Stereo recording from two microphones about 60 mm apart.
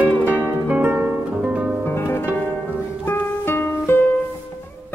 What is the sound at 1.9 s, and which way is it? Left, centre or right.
Music, left.